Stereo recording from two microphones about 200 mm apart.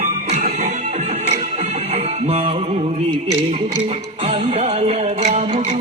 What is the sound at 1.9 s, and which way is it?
Music, 30° right (ahead or behind).